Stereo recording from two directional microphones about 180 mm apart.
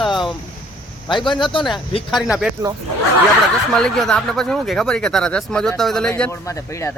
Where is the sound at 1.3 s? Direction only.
25° left (ahead or behind).